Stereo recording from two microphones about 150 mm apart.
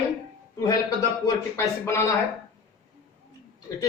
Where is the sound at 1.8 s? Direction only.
15° left (ahead or behind).